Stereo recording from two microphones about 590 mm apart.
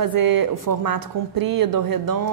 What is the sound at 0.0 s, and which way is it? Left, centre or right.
Speech, right.